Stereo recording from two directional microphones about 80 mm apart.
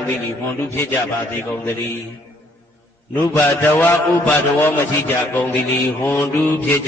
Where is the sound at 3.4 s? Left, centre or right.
Left.